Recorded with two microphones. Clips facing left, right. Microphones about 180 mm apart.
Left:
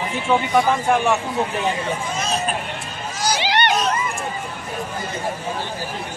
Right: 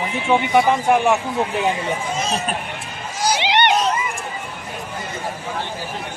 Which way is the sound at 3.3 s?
20° right (ahead or behind).